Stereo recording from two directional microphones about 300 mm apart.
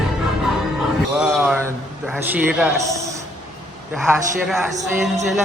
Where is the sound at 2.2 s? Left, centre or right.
Centre.